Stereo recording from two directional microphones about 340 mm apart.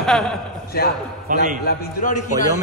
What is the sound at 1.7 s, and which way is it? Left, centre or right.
Speech, left.